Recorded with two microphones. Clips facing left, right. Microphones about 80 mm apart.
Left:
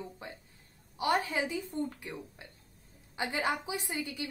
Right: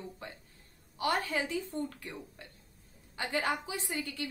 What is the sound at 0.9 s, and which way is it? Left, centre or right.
Speech, centre.